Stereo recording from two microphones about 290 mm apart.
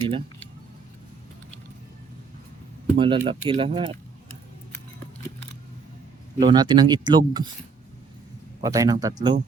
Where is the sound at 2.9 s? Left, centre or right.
Centre.